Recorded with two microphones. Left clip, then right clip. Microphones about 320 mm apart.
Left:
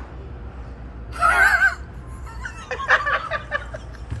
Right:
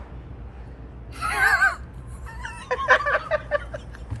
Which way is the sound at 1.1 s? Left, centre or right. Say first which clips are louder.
Left 6 dB; centre.